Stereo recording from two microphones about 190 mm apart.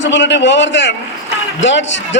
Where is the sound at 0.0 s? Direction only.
70° left (ahead or behind).